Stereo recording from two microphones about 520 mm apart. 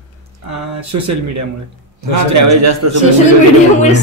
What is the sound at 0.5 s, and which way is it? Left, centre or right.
Speech, right.